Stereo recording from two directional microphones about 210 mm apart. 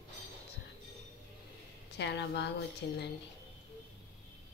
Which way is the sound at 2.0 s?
55° left (ahead or behind).